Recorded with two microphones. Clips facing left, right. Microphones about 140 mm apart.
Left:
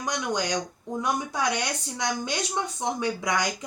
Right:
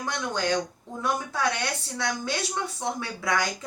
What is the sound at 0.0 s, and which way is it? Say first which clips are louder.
Speech: left 1 dB; 15° left (ahead or behind).